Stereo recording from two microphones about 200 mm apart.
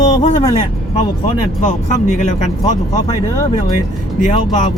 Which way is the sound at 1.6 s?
40° left (ahead or behind).